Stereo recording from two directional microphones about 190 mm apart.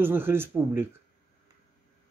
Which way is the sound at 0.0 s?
10° right (ahead or behind).